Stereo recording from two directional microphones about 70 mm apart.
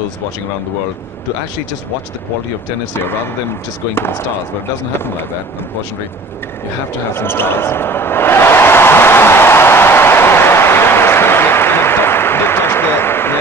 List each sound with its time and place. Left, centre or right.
2.9 s speech: left
7.2 s basketball bounce: left